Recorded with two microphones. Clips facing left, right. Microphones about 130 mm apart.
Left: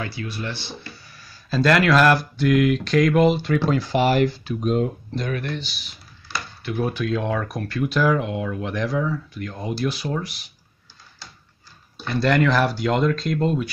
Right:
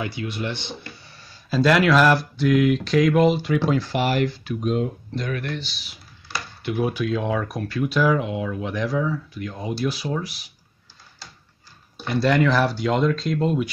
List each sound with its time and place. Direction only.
0.0 s speech: 20° right (ahead or behind)
1.5 s speech: 5° right (ahead or behind)
3.9 s speech: 35° left (ahead or behind)
6.6 s speech: 15° right (ahead or behind)
12.1 s speech: 5° right (ahead or behind)